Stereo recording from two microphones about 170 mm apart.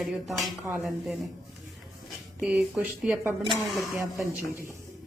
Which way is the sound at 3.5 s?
Centre (ahead or behind).